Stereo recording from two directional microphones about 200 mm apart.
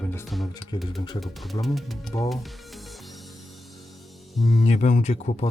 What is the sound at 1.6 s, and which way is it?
Speech, centre (ahead or behind).